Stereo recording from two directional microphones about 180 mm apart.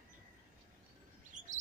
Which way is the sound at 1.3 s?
45° right (ahead or behind).